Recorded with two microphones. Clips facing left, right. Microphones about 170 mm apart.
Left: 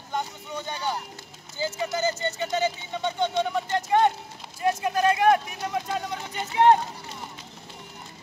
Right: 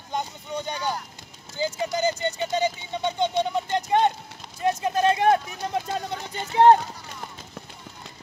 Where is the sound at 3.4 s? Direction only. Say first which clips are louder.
Right 1 dB; 20° right (ahead or behind).